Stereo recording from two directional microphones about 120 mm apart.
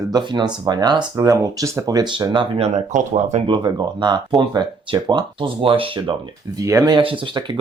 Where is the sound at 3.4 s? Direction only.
40° right (ahead or behind).